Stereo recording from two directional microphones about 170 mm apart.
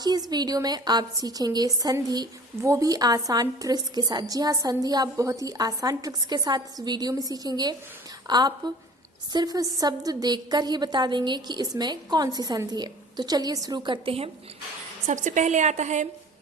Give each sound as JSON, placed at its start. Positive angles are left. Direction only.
{"t": 0.0, "sound": "a woman's voice", "side_deg": -25}
{"t": 15.0, "sound": "a woman's voice", "side_deg": -45}